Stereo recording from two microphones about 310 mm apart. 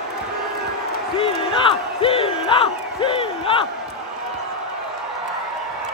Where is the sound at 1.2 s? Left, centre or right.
Centre.